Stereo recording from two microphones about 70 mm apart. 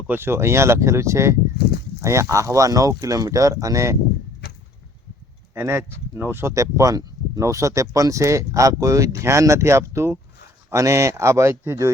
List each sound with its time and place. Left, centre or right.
0.1 s speech: right
5.5 s speech: right
6.5 s speech: right